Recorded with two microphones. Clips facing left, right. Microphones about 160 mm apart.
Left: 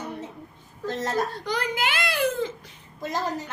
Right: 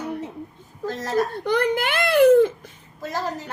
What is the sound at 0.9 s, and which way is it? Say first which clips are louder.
Speech: left 1 dB; 25° left (ahead or behind).